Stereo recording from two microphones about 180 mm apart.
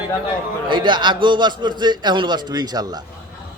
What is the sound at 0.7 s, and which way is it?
A man's voice, 25° right (ahead or behind).